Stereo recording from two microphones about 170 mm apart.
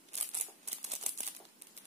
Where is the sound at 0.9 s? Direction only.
40° right (ahead or behind).